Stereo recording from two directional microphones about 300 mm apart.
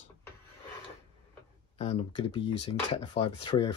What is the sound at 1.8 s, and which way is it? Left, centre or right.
Speech, centre.